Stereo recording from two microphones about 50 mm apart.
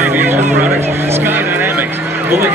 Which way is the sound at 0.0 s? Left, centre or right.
Right.